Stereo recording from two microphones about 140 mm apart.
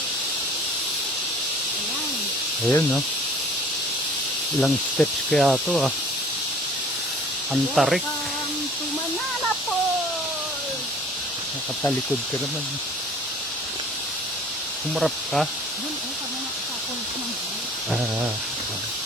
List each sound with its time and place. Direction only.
2.6 s speech: 15° left (ahead or behind)
4.6 s speech: 5° left (ahead or behind)
7.5 s speech: centre (ahead or behind)
14.9 s speech: centre (ahead or behind)